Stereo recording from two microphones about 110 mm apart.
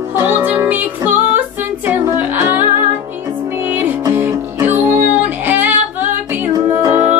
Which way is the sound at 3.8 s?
20° right (ahead or behind).